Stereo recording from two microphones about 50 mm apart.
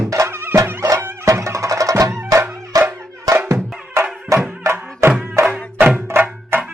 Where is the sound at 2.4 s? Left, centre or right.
Right.